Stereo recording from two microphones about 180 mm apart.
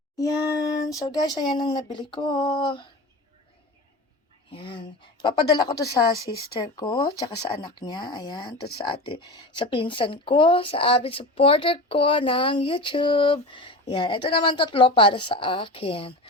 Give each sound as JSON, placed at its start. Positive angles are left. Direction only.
{"t": 0.9, "sound": "speech", "side_deg": 20}
{"t": 4.5, "sound": "speech", "side_deg": 30}